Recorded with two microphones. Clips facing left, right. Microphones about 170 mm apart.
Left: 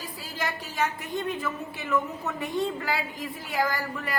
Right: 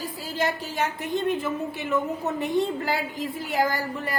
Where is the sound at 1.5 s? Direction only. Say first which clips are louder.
Right 3 dB; 25° right (ahead or behind).